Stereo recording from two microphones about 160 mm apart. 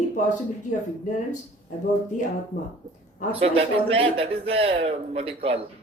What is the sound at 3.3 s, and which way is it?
A man's voice, 35° right (ahead or behind).